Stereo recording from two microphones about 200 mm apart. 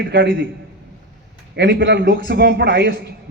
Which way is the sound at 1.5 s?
60° right (ahead or behind).